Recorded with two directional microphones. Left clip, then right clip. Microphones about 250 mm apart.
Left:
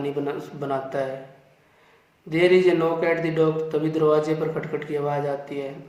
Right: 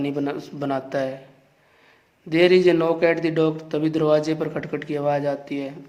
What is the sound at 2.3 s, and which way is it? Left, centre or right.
A man's voice, right.